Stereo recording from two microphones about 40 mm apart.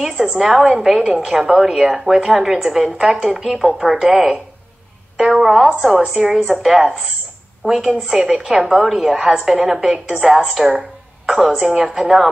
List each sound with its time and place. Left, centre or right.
0.4 s a woman's voice: centre
1.0 s a woman's voice: right
1.3 s a woman's voice: centre